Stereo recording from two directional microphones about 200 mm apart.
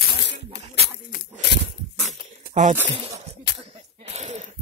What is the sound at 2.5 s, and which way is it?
Speech, 35° right (ahead or behind).